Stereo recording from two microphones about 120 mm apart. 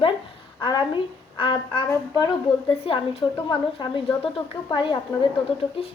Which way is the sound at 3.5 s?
45° left (ahead or behind).